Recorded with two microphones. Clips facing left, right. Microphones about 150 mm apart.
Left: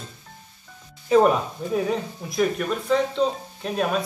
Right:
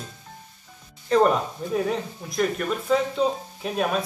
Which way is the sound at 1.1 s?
5° left (ahead or behind).